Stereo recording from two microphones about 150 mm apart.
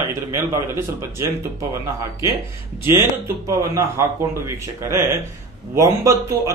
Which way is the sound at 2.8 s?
20° right (ahead or behind).